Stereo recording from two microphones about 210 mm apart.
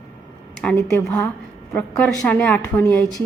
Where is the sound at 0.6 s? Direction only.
5° left (ahead or behind).